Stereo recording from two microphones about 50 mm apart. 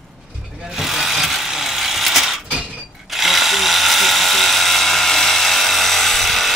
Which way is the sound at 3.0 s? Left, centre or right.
Centre.